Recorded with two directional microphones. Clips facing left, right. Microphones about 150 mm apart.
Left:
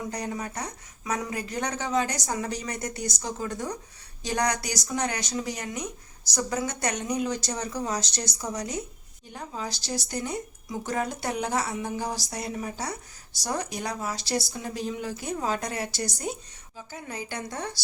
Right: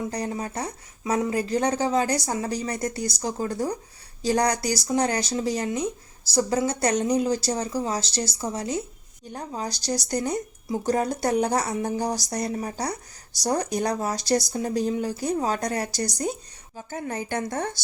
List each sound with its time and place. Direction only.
0.1 s a woman's voice: 30° right (ahead or behind)
9.3 s a woman's voice: 40° right (ahead or behind)